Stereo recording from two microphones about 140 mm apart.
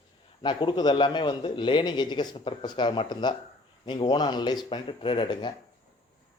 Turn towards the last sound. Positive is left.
turn(degrees=35)  # may be behind; listen again after turning